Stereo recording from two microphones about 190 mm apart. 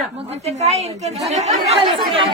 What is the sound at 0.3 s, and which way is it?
A woman's voice, 35° right (ahead or behind).